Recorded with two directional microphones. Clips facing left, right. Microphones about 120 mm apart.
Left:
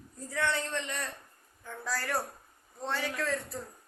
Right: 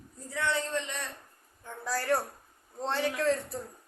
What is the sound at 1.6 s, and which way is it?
A woman's voice, 20° right (ahead or behind).